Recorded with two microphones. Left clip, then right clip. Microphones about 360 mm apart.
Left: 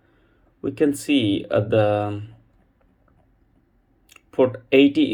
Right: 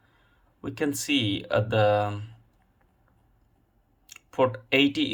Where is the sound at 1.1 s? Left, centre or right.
Centre.